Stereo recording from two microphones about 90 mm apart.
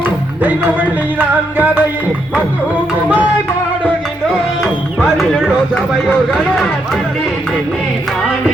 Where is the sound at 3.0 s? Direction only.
15° right (ahead or behind).